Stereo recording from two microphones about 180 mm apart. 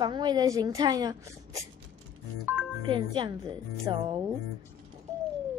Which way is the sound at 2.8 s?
25° right (ahead or behind).